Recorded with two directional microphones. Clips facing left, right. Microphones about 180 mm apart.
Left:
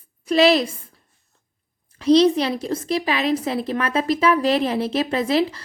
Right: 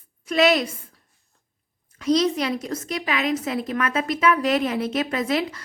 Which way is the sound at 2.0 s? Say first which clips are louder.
Left 6 dB; 30° left (ahead or behind).